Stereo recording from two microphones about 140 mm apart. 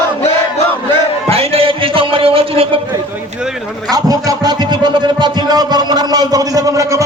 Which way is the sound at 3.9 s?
25° right (ahead or behind).